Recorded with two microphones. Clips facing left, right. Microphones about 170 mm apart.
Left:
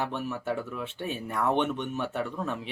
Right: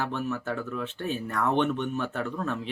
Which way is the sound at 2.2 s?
10° left (ahead or behind).